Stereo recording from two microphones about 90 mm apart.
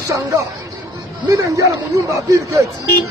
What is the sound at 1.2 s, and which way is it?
Speech, 40° right (ahead or behind).